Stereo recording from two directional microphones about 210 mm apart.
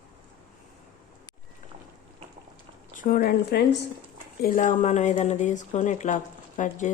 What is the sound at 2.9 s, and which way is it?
Speech, 40° left (ahead or behind).